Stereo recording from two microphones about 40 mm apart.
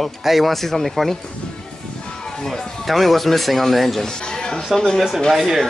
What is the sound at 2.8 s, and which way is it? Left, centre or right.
Speech, centre.